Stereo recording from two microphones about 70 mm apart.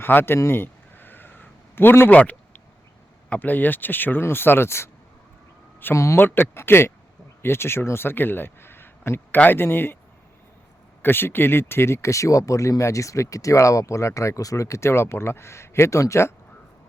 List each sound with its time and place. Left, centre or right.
0.0 s speech: left
0.3 s a sound: left
3.2 s speech: left
5.9 s speech: left
6.1 s speech: left
11.0 s speech: left